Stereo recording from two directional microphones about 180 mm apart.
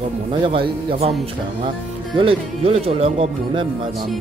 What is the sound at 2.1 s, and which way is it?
Speech, 30° right (ahead or behind).